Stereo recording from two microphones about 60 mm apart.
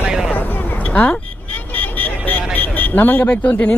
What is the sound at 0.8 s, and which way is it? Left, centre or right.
Vehicle, left.